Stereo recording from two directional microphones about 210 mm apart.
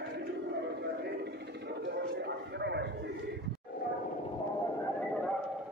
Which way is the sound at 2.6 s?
55° right (ahead or behind).